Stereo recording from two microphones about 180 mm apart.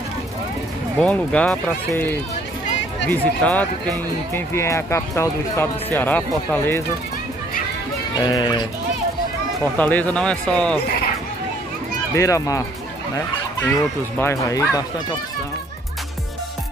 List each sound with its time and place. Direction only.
1.0 s speech: 5° left (ahead or behind)
3.1 s speech: 10° left (ahead or behind)
8.1 s speech: 25° left (ahead or behind)
9.8 s speech: 10° left (ahead or behind)
12.1 s speech: 15° left (ahead or behind)
14.1 s speech: 15° left (ahead or behind)